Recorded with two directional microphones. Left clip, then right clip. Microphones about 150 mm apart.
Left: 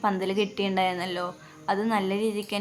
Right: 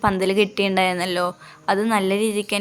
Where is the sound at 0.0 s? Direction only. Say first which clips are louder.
Right 7 dB; 30° right (ahead or behind).